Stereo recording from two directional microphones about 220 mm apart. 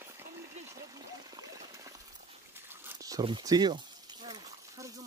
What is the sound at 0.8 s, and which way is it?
Trickle, 15° right (ahead or behind).